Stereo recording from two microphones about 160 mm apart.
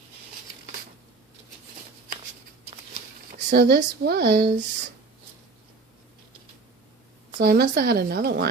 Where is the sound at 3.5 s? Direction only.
90° right.